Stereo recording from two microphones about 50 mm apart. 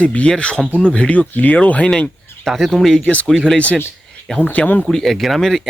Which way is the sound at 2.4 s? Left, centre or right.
Centre.